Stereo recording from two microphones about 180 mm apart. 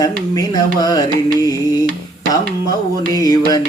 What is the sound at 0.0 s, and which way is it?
Music, 20° left (ahead or behind).